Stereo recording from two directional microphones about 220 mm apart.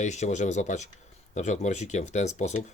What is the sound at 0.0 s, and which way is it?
Speech, 30° left (ahead or behind).